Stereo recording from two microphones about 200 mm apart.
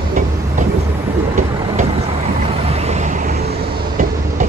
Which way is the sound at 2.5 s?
30° right (ahead or behind).